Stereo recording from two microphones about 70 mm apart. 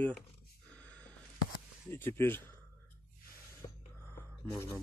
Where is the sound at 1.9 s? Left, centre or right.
Left.